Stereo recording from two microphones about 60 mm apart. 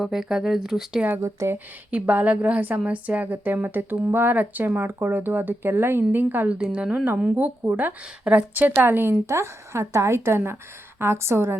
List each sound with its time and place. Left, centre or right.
0.0 s speech: centre
1.2 s speech: right
1.5 s a woman's voice: right
6.5 s a woman's voice: centre
7.3 s speech: right
8.8 s a woman's voice: right
9.2 s speech: right